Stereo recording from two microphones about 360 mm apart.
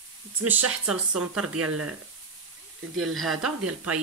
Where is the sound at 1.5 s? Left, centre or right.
Right.